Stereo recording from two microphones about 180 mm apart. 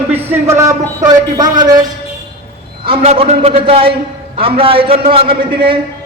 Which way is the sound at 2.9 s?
35° right (ahead or behind).